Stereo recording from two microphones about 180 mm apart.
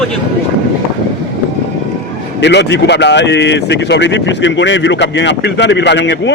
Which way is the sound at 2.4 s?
75° left (ahead or behind).